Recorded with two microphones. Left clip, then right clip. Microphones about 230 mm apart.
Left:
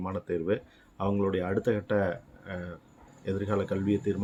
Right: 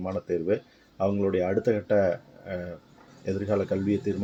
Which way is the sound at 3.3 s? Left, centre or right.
Centre.